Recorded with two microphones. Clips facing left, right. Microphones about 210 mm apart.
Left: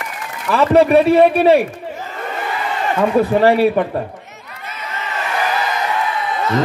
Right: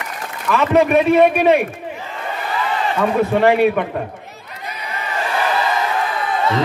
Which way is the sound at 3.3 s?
35° left (ahead or behind).